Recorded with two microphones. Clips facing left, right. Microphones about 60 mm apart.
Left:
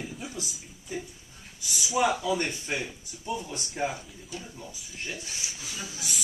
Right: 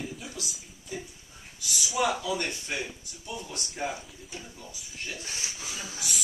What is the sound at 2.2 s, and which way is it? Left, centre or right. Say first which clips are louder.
Speech: left 3 dB; left.